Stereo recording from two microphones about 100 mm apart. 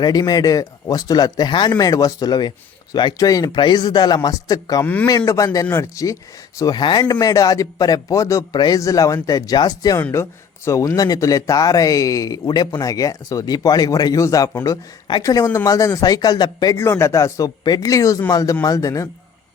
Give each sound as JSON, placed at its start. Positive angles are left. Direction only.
{"t": 0.0, "sound": "a man's voice", "side_deg": 45}
{"t": 6.6, "sound": "speech", "side_deg": 45}
{"t": 8.5, "sound": "a man's voice", "side_deg": 45}
{"t": 8.8, "sound": "speech", "side_deg": 35}
{"t": 16.7, "sound": "speech", "side_deg": 25}
{"t": 17.6, "sound": "a man's voice", "side_deg": 45}
{"t": 17.9, "sound": "speech", "side_deg": 30}